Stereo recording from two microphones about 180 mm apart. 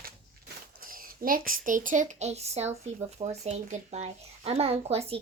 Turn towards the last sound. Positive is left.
turn(degrees=-35)  # may be behind; listen again after turning